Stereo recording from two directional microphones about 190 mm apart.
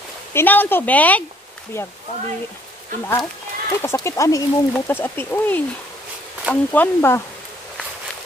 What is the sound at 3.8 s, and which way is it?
Speech, 15° left (ahead or behind).